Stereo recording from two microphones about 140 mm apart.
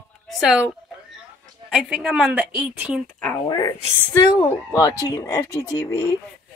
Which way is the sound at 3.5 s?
30° left (ahead or behind).